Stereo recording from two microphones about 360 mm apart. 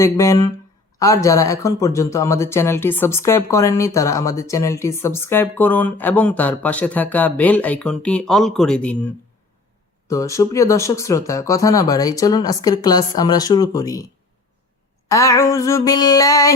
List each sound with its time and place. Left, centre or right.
0.0 s speech: centre
10.1 s speech: centre
15.1 s speech: centre